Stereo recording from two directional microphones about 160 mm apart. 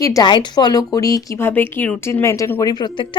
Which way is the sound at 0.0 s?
25° left (ahead or behind).